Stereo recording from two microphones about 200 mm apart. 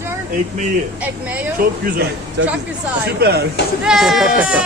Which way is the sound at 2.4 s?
65° right (ahead or behind).